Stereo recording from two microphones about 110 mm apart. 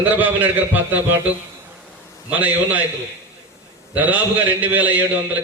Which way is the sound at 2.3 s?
15° right (ahead or behind).